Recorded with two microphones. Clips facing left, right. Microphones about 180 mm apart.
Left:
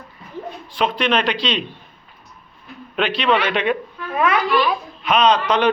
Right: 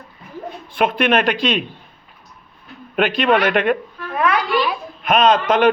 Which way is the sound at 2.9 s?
50° right (ahead or behind).